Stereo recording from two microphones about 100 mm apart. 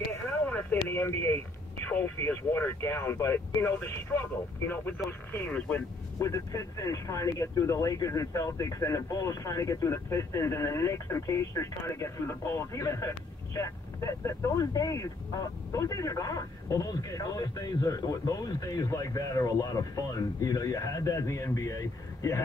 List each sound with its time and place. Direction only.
0.5 s speech: 20° left (ahead or behind)
6.1 s speech: 30° left (ahead or behind)